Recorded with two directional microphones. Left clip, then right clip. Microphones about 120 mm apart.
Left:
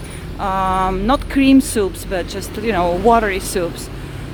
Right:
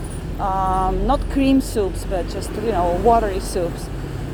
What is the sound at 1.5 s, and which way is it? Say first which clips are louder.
Speech: left 4 dB; 55° left (ahead or behind).